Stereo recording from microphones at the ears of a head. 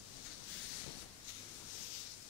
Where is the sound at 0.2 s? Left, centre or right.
Left.